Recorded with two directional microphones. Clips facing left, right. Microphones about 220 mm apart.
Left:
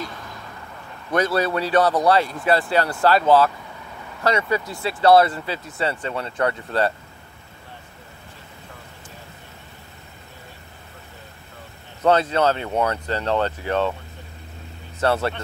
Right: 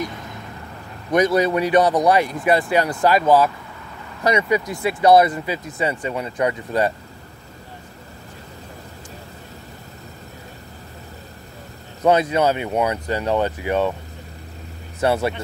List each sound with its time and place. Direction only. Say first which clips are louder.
1.1 s speech: right 4 dB; 15° right (ahead or behind)
12.0 s speech: right 1 dB; 15° right (ahead or behind)
15.0 s speech: right 2 dB; 10° right (ahead or behind)